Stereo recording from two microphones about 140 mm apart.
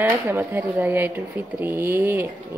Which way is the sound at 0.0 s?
15° right (ahead or behind).